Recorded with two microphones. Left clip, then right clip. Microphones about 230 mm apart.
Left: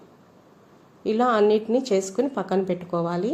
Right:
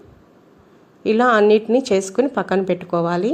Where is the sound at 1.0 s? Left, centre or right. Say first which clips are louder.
Right 6 dB; centre.